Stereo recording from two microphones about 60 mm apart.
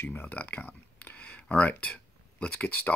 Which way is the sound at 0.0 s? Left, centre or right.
Left.